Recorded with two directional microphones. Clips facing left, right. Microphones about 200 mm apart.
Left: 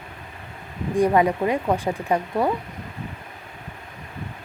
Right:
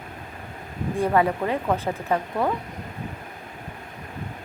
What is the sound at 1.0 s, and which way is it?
Speech, 15° left (ahead or behind).